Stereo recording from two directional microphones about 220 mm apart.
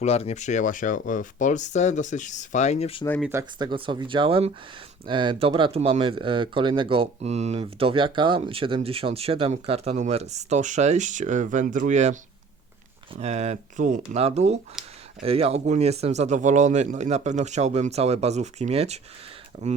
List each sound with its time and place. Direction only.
0.0 s speech: 30° left (ahead or behind)
3.2 s speech: 10° right (ahead or behind); by 12.1 s 35° right (ahead or behind)
13.1 s speech: 30° right (ahead or behind)